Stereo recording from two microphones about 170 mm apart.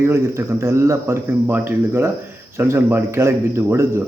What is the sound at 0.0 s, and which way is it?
A man's voice, 15° right (ahead or behind).